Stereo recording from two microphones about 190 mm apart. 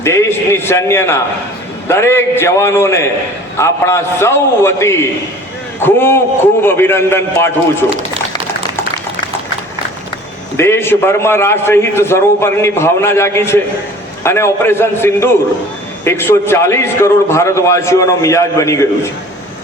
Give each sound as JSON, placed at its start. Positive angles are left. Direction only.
{"t": 0.0, "sound": "a man's voice", "side_deg": 15}
{"t": 10.6, "sound": "a man's voice", "side_deg": 10}